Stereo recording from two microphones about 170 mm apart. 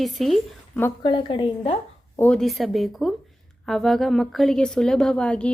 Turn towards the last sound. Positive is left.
turn(degrees=5)  # may be behind; listen again after turning